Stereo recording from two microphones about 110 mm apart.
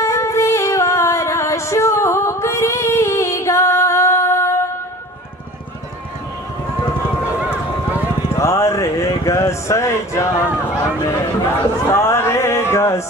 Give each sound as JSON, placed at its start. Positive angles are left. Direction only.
{"t": 0.0, "sound": "music", "side_deg": 25}
{"t": 8.4, "sound": "speech", "side_deg": 25}
{"t": 11.9, "sound": "a sound", "side_deg": 25}